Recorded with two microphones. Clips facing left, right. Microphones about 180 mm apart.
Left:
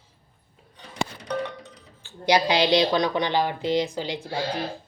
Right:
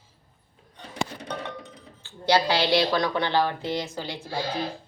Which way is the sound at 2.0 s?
15° left (ahead or behind).